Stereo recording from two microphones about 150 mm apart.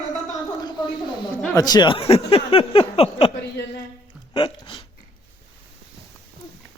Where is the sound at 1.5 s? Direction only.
25° left (ahead or behind).